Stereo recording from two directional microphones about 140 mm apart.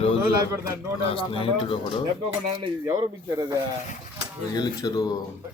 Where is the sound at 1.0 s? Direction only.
40° left (ahead or behind).